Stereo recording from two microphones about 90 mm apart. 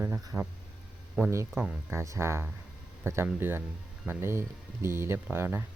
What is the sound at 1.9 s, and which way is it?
Speech, 30° right (ahead or behind).